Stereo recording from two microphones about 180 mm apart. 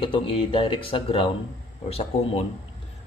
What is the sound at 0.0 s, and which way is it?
Speech, 30° left (ahead or behind).